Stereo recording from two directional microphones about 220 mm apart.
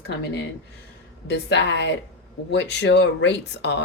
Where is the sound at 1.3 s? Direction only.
50° left (ahead or behind).